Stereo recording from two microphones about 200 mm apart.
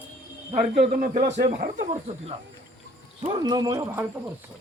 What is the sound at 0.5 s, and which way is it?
Speech, 30° right (ahead or behind).